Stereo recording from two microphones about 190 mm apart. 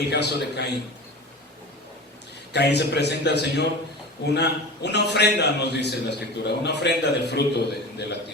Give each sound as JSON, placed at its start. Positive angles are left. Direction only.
{"t": 0.1, "sound": "a man's voice", "side_deg": 60}
{"t": 2.5, "sound": "a man's voice", "side_deg": 60}